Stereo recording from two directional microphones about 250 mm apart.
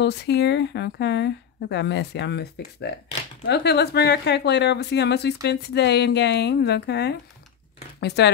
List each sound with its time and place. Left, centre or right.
0.0 s speech: left